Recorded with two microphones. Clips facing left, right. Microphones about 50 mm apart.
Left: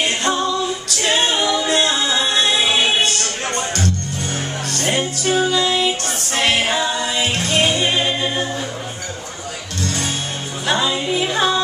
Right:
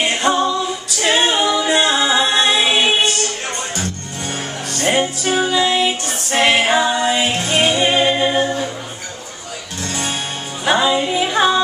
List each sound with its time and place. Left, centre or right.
0.0 s a capella: centre
4.7 s music: centre
10.6 s music: centre